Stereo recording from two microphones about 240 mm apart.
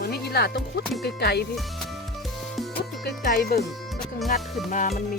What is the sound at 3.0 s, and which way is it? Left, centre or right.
Speech, left.